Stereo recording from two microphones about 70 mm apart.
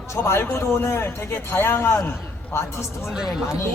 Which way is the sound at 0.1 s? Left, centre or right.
Left.